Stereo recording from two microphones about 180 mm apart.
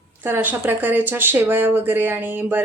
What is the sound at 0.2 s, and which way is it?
Speech, 10° right (ahead or behind).